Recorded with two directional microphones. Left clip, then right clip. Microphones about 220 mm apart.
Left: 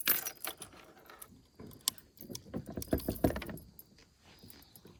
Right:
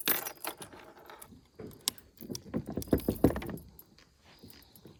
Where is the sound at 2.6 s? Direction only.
10° right (ahead or behind).